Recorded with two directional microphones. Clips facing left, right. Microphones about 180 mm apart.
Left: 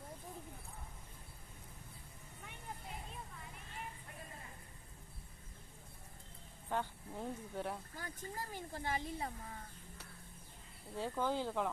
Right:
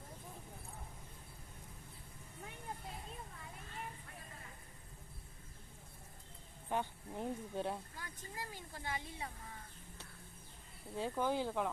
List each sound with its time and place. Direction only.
6.7 s speech: 15° right (ahead or behind)
7.9 s speech: 35° left (ahead or behind)
10.9 s speech: 15° right (ahead or behind)